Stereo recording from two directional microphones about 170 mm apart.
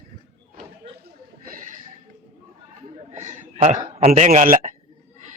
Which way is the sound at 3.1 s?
45° right (ahead or behind).